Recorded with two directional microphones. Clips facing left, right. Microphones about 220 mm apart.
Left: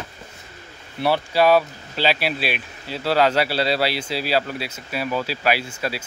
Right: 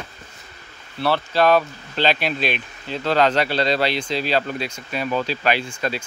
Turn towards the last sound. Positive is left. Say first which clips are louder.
# right 1 dB
turn(degrees=5)  # may be behind; listen again after turning